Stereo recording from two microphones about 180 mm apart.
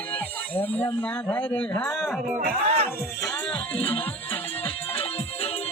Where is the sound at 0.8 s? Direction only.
25° left (ahead or behind).